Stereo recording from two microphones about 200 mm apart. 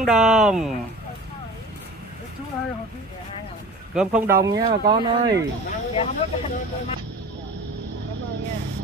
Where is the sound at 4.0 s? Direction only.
5° right (ahead or behind).